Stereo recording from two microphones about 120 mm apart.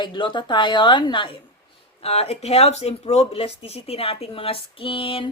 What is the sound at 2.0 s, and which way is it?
Speech, 55° left (ahead or behind).